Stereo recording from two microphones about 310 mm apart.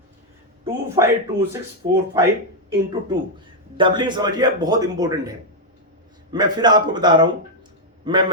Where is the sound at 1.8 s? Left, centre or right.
Centre.